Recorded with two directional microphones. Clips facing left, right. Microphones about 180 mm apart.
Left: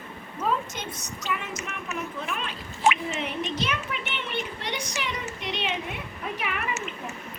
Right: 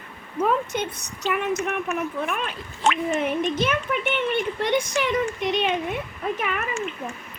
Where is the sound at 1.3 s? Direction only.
60° right (ahead or behind).